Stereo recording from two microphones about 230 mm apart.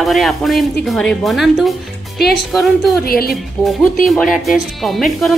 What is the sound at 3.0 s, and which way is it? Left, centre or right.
Speech, left.